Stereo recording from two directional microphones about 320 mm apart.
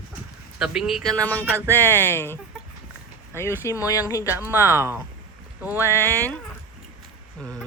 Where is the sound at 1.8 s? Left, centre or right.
Centre.